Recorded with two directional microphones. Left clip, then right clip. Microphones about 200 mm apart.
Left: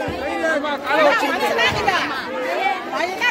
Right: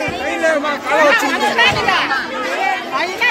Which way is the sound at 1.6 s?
55° left (ahead or behind).